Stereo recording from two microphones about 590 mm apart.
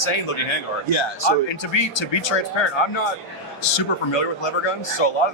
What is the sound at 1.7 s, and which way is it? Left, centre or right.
Speech, left.